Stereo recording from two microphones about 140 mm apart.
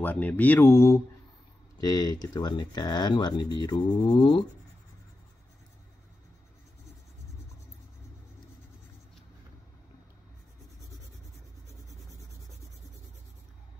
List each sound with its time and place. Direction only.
0.0 s speech: 10° left (ahead or behind); by 4.5 s 35° left (ahead or behind)